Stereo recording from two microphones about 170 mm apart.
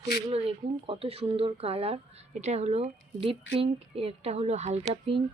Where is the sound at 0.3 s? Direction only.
35° right (ahead or behind).